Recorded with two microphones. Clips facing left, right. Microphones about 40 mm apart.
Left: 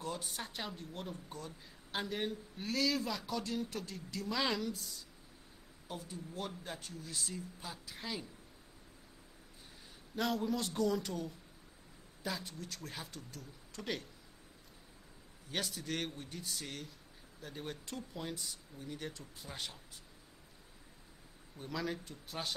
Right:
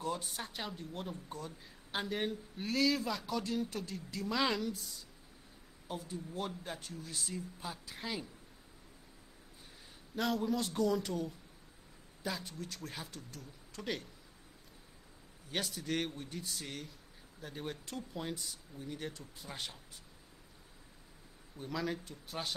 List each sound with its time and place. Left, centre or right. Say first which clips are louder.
0.0 s speech: right 3 dB; centre
10.1 s speech: right 1 dB; centre
15.5 s speech: right 2 dB; centre
21.5 s speech: right 2 dB; centre